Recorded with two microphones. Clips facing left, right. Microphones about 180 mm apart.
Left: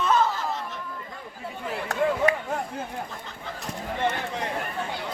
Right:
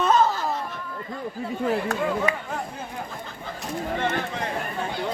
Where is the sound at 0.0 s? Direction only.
40° right (ahead or behind).